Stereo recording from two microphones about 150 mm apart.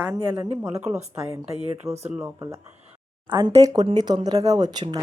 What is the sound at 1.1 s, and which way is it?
Speech, 20° right (ahead or behind).